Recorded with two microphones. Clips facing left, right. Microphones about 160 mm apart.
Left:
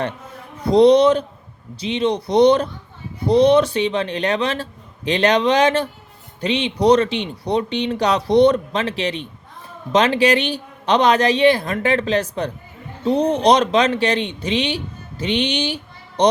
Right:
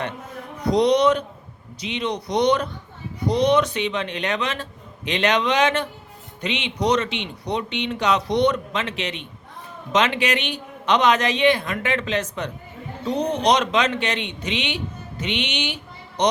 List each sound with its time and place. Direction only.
0.7 s speech: 30° left (ahead or behind)